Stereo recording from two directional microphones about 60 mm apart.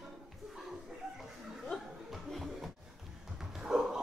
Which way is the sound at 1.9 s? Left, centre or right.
Centre.